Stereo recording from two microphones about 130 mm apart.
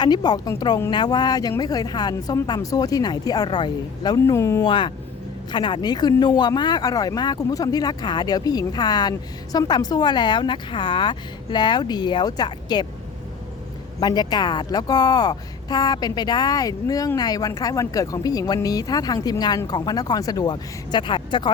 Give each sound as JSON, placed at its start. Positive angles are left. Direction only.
{"t": 0.0, "sound": "speech", "side_deg": 35}
{"t": 4.6, "sound": "speech", "side_deg": 40}
{"t": 14.0, "sound": "speech", "side_deg": 30}